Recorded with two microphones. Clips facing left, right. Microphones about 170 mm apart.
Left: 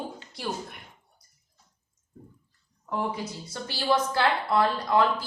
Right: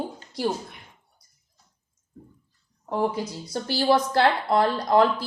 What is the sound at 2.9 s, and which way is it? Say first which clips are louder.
A woman's voice: right 5 dB; 40° right (ahead or behind).